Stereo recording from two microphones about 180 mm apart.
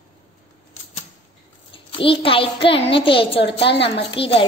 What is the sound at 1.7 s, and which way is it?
A child's voice, 30° left (ahead or behind).